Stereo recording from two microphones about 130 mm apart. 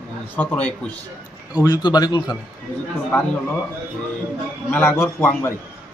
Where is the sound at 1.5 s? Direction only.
30° left (ahead or behind).